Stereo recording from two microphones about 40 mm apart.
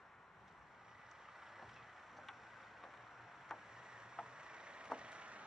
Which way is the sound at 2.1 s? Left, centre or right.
Centre.